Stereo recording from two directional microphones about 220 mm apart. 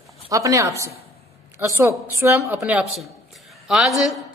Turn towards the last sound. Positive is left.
turn(degrees=0)  # may be behind; listen again after turning